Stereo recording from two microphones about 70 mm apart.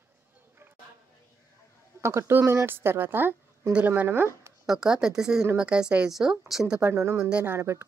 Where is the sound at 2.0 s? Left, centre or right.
Right.